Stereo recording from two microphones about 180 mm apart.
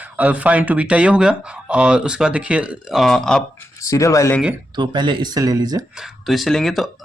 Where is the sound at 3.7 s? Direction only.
15° left (ahead or behind).